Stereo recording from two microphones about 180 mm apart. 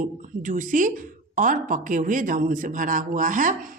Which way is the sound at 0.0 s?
45° right (ahead or behind).